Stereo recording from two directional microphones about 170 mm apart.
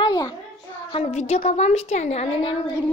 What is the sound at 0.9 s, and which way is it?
A woman's voice, 35° left (ahead or behind).